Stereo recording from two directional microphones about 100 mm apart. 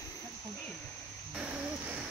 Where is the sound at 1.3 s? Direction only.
10° right (ahead or behind).